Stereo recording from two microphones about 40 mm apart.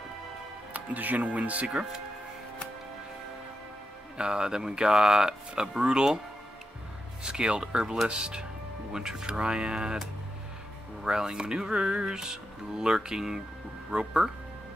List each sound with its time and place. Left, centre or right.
0.7 s speech: right
1.7 s speech: right
4.2 s speech: right
7.2 s speech: right
7.6 s speech: centre
8.1 s speech: right
11.1 s speech: centre